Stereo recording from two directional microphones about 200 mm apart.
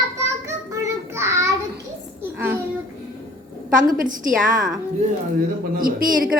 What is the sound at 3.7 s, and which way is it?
Speech, 45° right (ahead or behind).